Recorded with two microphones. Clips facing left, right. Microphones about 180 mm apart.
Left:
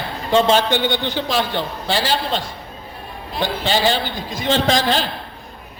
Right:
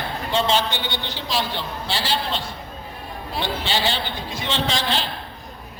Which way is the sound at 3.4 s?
45° left (ahead or behind).